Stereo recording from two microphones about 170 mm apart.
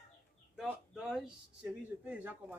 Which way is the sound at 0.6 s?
5° right (ahead or behind).